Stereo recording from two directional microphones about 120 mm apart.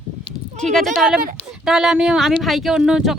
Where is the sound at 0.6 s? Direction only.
5° left (ahead or behind).